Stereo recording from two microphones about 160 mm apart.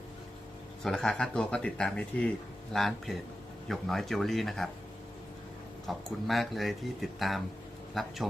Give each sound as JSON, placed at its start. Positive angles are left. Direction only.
{"t": 0.9, "sound": "speech", "side_deg": 5}
{"t": 5.9, "sound": "speech", "side_deg": 0}